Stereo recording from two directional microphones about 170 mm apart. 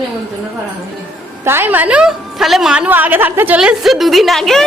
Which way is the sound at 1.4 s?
15° right (ahead or behind).